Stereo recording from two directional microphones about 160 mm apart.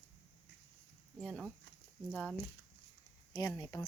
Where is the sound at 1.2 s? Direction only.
Centre (ahead or behind).